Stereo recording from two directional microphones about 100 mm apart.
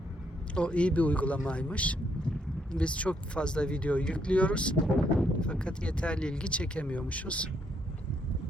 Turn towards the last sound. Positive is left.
turn(degrees=15)  # may be behind; listen again after turning